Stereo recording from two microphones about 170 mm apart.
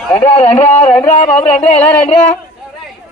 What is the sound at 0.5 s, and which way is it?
Speech, 35° left (ahead or behind).